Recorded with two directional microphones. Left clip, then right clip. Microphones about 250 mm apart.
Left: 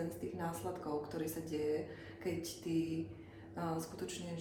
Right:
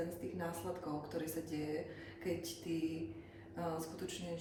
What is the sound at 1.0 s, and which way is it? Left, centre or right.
Speech, centre.